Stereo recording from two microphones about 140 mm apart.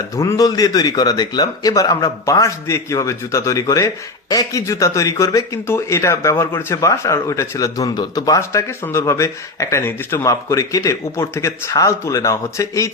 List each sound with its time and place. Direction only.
0.2 s a man's voice: 25° left (ahead or behind)